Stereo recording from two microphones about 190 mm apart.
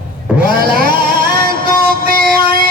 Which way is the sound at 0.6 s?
50° right (ahead or behind).